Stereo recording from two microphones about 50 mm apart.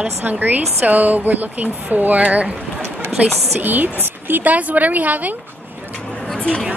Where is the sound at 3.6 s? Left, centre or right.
Right.